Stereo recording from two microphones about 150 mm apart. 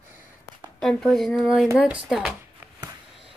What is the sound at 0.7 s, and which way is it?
Speech, centre (ahead or behind).